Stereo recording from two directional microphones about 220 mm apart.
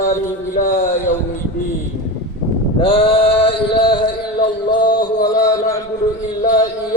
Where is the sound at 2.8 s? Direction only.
25° left (ahead or behind).